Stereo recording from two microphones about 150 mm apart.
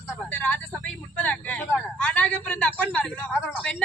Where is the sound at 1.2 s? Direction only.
10° left (ahead or behind).